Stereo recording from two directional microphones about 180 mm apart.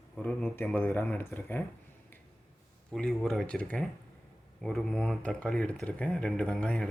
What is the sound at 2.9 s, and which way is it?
Speech, centre (ahead or behind).